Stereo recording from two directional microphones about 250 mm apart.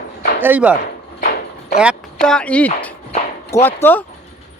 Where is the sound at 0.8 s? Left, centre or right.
Left.